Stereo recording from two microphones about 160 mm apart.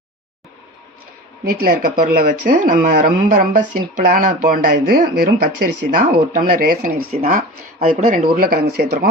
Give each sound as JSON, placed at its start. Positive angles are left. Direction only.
{"t": 1.5, "sound": "speech", "side_deg": -65}